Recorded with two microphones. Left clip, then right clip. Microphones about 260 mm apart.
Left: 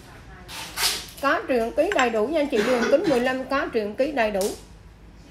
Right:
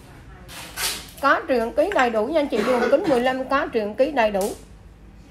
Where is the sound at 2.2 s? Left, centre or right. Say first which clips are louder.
Right 1 dB; centre.